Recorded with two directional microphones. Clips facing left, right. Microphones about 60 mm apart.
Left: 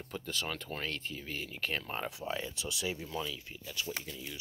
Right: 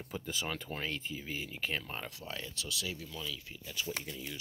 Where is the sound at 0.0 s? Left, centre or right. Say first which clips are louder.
Even; centre.